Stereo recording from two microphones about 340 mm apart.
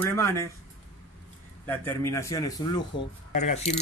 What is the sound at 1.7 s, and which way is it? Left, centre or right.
Speech, centre.